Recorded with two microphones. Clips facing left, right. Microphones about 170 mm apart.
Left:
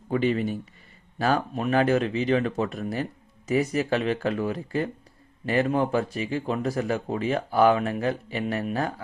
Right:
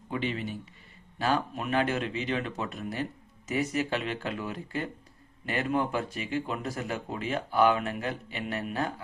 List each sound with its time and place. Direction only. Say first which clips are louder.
0.1 s speech: left 8 dB; 45° left (ahead or behind)